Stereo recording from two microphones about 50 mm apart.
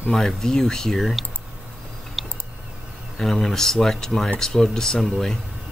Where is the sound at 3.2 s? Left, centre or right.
Centre.